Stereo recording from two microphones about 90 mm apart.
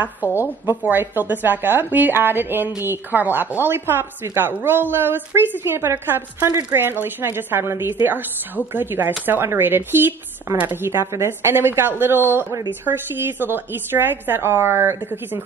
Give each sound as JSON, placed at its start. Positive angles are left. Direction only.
{"t": 0.4, "sound": "a woman's voice", "side_deg": -25}